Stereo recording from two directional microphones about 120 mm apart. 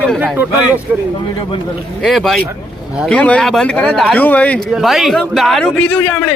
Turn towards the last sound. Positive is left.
turn(degrees=15)  # may be behind; listen again after turning